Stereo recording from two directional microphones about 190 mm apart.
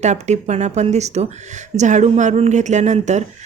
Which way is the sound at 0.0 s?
40° right (ahead or behind).